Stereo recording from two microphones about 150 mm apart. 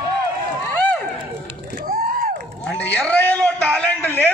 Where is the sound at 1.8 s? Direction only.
70° right (ahead or behind).